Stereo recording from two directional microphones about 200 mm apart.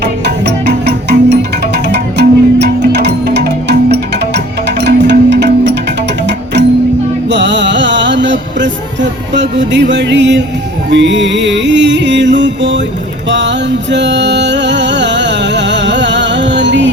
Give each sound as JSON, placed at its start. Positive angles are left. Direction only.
{"t": 0.0, "sound": "music", "side_deg": -55}